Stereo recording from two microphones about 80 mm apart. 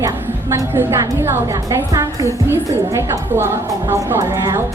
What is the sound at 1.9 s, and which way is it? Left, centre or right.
Speech, right.